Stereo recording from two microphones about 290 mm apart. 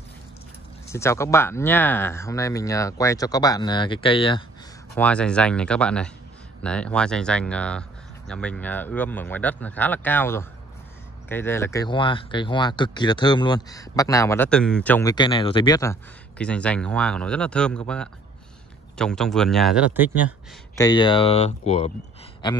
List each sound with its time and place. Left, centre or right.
0.8 s speech: centre
4.9 s speech: centre
20.7 s speech: centre